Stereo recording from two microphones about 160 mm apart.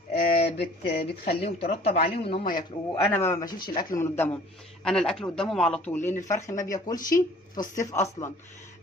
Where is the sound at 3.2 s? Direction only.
20° left (ahead or behind).